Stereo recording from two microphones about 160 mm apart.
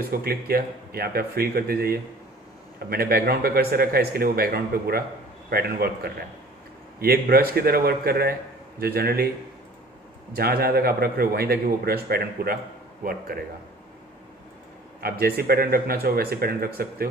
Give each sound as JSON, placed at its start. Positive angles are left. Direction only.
{"t": 0.1, "sound": "a man's voice", "side_deg": -70}
{"t": 10.3, "sound": "a man's voice", "side_deg": -70}
{"t": 15.0, "sound": "a man's voice", "side_deg": -70}